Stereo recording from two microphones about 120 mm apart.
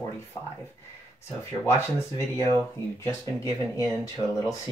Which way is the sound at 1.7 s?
25° left (ahead or behind).